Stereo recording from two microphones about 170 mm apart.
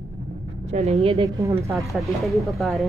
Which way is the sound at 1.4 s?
15° right (ahead or behind).